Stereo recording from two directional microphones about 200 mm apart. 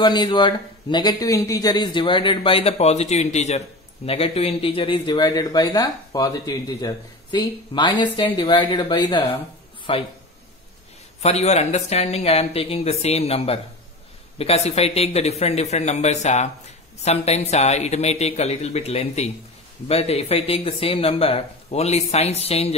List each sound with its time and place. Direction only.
0.0 s a man's voice: 20° left (ahead or behind)
11.2 s a man's voice: 30° left (ahead or behind)